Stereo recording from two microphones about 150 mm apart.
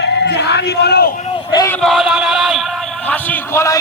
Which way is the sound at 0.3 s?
90° left.